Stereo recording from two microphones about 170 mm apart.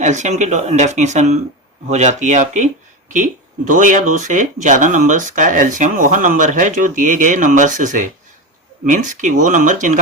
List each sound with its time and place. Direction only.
0.0 s speech: 45° right (ahead or behind)
3.7 s speech: 50° right (ahead or behind)